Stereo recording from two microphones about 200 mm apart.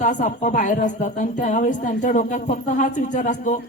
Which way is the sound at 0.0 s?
40° left (ahead or behind).